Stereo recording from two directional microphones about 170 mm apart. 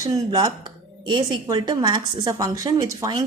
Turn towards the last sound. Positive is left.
turn(degrees=-25)  # may be behind; listen again after turning